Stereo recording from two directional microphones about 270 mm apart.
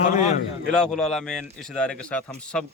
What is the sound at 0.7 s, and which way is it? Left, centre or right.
Speech, centre.